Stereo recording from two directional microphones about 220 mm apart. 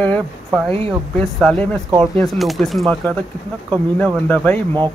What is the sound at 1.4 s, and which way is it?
Speech, 5° left (ahead or behind).